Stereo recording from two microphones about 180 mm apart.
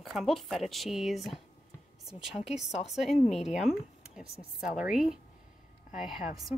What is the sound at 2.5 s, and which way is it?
Speech, 40° left (ahead or behind).